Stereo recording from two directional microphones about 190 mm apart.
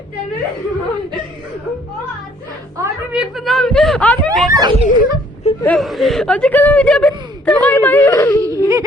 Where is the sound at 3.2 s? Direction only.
Centre (ahead or behind).